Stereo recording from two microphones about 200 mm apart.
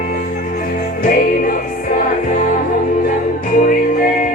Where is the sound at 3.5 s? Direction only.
45° left (ahead or behind).